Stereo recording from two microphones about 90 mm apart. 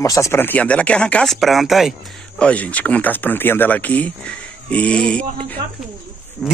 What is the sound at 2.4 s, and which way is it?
Speech, 15° left (ahead or behind).